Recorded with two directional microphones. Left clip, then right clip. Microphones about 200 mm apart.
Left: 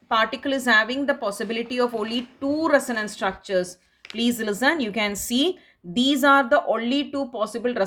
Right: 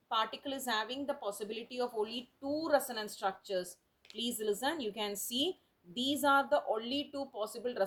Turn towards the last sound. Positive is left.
turn(degrees=20)  # may be behind; listen again after turning